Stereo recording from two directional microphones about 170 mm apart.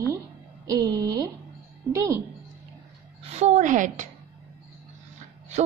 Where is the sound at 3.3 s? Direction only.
45° right (ahead or behind).